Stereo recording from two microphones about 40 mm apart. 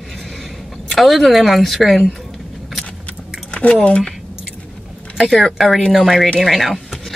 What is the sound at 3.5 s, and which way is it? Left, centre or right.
Squish, left.